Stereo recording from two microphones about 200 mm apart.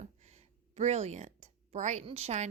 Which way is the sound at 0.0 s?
35° right (ahead or behind).